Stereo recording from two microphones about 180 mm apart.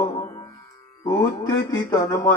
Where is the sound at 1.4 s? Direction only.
20° left (ahead or behind).